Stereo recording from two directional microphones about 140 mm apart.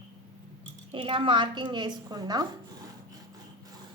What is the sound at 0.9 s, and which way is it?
A woman's voice, 40° right (ahead or behind).